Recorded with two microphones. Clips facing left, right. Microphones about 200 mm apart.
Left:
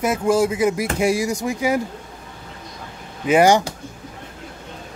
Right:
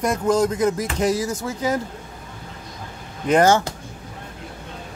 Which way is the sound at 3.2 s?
10° left (ahead or behind).